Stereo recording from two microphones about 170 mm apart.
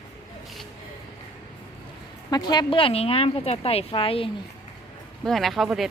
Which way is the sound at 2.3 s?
25° left (ahead or behind).